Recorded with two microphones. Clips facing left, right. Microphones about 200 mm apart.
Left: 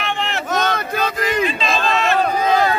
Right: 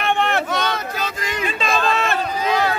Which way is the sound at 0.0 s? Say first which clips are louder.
Right 4 dB; 55° right (ahead or behind).